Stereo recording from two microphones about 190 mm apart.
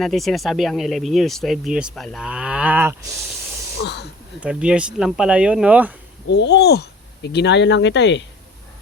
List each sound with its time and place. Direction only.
0.0 s speech: centre (ahead or behind)
3.8 s speech: 60° left (ahead or behind)
4.4 s speech: 5° right (ahead or behind)
6.2 s speech: 65° left (ahead or behind)